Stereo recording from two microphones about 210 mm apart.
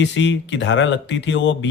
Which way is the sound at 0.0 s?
60° left (ahead or behind).